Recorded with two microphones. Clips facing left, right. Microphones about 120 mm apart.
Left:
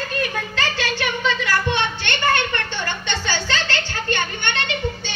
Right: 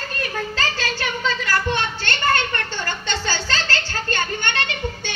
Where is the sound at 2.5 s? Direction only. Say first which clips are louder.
Left 1 dB; 35° right (ahead or behind).